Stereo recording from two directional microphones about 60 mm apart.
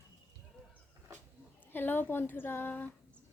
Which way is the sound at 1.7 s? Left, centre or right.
Left.